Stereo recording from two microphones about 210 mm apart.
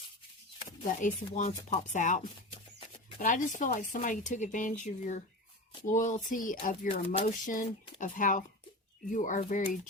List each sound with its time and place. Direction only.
1.0 s speech: 35° left (ahead or behind)